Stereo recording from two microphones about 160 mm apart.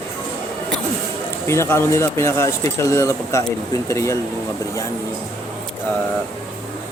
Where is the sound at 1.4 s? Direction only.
15° left (ahead or behind).